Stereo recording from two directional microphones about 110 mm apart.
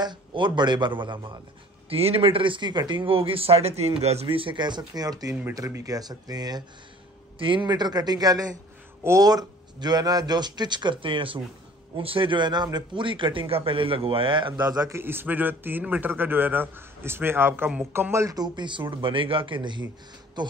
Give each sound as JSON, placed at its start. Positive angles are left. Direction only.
{"t": 0.0, "sound": "a man's voice", "side_deg": -45}
{"t": 1.9, "sound": "a man's voice", "side_deg": -60}
{"t": 7.3, "sound": "a man's voice", "side_deg": -50}
{"t": 14.9, "sound": "a man's voice", "side_deg": -20}